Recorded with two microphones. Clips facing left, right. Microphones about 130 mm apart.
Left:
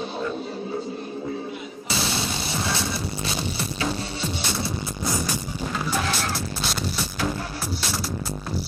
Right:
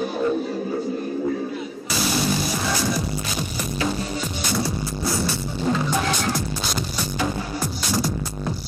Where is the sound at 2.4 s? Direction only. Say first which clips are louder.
Right 3 dB; 30° left (ahead or behind).